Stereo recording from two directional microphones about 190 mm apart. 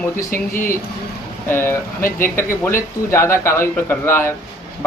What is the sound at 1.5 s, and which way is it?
Speech, 10° left (ahead or behind).